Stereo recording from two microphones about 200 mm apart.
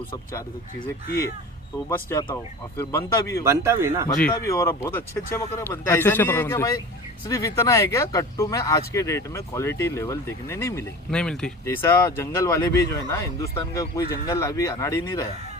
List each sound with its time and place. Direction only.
2.2 s speech: 15° left (ahead or behind)
3.4 s a man's voice: 15° right (ahead or behind)
4.4 s speech: 15° left (ahead or behind)